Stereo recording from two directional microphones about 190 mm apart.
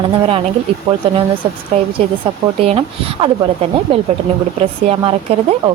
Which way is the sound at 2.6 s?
30° right (ahead or behind).